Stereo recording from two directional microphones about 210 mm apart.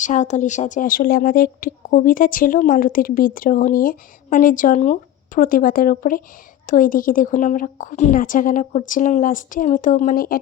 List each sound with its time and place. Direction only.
0.0 s speech: 35° left (ahead or behind)